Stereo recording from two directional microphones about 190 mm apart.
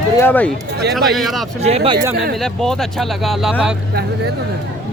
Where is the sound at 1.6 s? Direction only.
35° right (ahead or behind).